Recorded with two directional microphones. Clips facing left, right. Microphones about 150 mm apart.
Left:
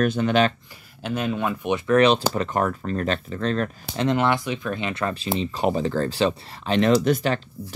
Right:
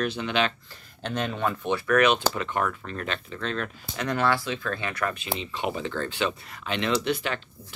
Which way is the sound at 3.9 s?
25° left (ahead or behind).